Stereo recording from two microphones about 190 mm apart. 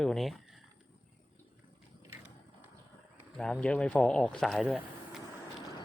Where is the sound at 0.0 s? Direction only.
Centre (ahead or behind).